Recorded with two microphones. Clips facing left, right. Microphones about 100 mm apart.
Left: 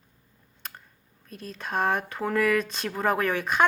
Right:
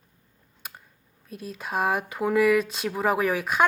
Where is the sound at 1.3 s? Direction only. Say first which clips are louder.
Right 1 dB; 5° right (ahead or behind).